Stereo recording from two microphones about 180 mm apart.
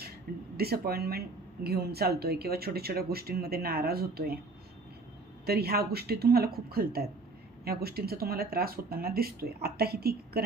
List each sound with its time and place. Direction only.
0.5 s speech: 60° right (ahead or behind)
5.5 s speech: 60° right (ahead or behind)